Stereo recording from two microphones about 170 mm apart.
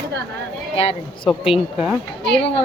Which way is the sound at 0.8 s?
35° left (ahead or behind).